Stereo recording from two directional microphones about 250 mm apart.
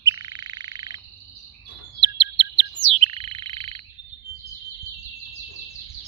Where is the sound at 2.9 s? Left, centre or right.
Right.